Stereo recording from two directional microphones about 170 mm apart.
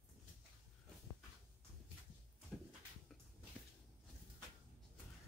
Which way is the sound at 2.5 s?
5° left (ahead or behind).